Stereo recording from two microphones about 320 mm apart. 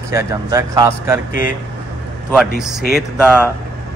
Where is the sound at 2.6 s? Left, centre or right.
Centre.